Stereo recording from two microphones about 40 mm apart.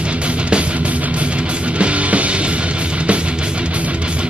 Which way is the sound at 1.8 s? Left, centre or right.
Right.